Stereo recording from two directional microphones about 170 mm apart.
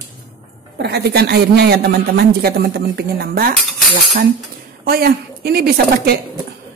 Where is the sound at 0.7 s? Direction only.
75° right (ahead or behind).